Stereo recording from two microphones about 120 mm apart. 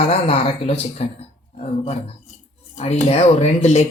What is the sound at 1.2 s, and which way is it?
Speech, 65° left (ahead or behind).